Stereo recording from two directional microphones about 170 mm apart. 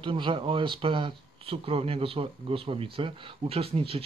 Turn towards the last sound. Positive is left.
turn(degrees=-35)  # may be behind; listen again after turning